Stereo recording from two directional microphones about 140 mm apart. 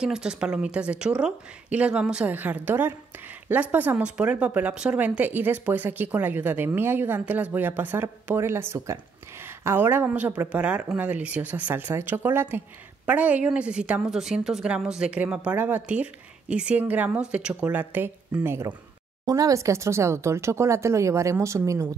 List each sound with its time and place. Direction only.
0.0 s speech: 5° right (ahead or behind); by 21.8 s 20° right (ahead or behind)